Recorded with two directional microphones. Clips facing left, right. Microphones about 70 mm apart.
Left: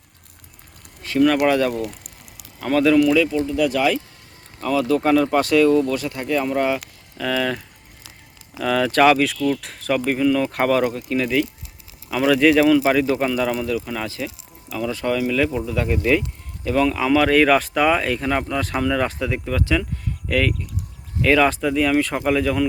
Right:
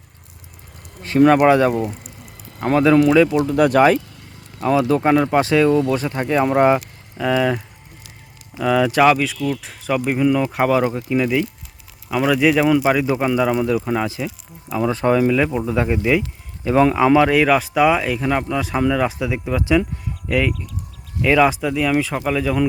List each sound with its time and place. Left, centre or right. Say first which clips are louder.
1.0 s speech: right 4 dB; right
1.7 s speech: right 4 dB; right
2.6 s speech: right 2 dB; right
3.4 s speech: right 5 dB; right
4.6 s speech: right 3 dB; right
7.2 s speech: right 4 dB; centre
10.8 s speech: right 3 dB; centre
17.2 s speech: even; centre